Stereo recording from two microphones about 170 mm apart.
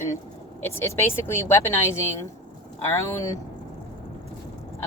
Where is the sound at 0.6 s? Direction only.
15° left (ahead or behind).